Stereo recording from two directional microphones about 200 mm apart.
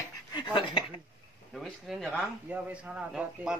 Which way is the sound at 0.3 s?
25° left (ahead or behind).